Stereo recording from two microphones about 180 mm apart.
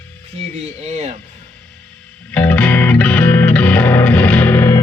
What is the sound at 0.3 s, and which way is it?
Speech, 40° right (ahead or behind).